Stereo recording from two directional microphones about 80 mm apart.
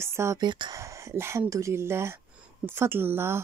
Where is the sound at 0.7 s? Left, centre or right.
Right.